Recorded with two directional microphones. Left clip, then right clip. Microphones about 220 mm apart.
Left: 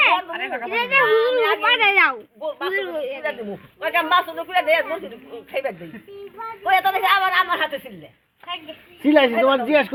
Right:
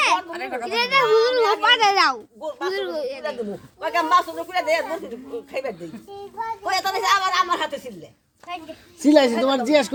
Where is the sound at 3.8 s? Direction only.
25° left (ahead or behind).